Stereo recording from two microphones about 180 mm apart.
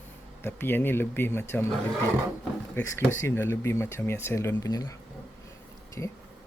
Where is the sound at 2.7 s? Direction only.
15° left (ahead or behind).